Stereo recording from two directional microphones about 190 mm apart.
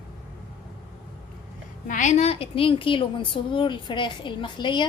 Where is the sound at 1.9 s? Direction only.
40° left (ahead or behind).